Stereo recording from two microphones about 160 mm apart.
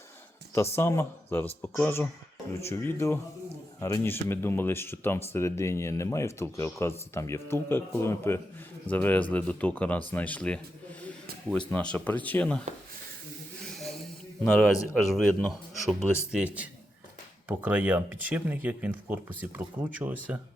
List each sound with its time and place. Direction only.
0.8 s speech: 15° left (ahead or behind)
11.7 s speech: 10° left (ahead or behind)
13.7 s a sound: centre (ahead or behind)
14.4 s speech: 5° left (ahead or behind)